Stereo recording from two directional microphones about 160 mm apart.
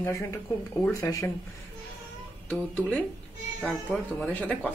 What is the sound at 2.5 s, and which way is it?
Speech, 5° left (ahead or behind).